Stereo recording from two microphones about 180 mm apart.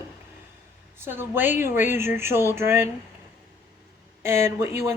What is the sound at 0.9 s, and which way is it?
Speech, 10° right (ahead or behind).